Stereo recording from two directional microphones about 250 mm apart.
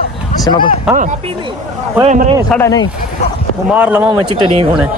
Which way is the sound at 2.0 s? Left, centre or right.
Right.